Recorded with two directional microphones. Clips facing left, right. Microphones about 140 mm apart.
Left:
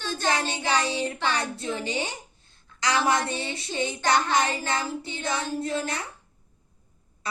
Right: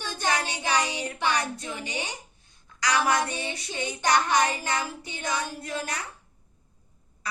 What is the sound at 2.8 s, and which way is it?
Speech, 25° left (ahead or behind).